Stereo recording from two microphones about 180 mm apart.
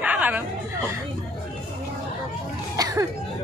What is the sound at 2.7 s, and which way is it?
Cough, 20° right (ahead or behind).